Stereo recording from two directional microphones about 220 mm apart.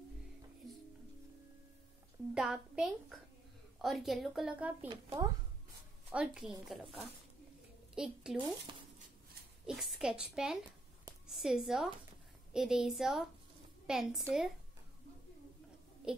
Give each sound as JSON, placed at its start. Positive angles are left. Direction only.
{"t": 2.3, "sound": "a woman's voice", "side_deg": -5}
{"t": 4.8, "sound": "a woman's voice", "side_deg": -20}
{"t": 6.1, "sound": "a woman's voice", "side_deg": -5}
{"t": 9.7, "sound": "a woman's voice", "side_deg": 0}
{"t": 16.1, "sound": "a child's voice", "side_deg": -5}